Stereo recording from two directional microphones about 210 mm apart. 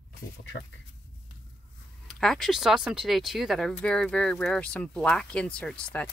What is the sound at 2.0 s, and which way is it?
Speech, centre (ahead or behind).